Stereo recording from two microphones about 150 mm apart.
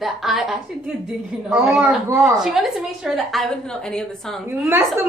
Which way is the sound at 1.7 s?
15° right (ahead or behind).